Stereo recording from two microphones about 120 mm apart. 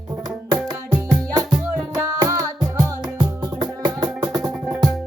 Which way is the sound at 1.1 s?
35° right (ahead or behind).